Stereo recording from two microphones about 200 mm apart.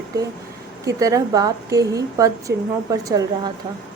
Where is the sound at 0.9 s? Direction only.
15° right (ahead or behind).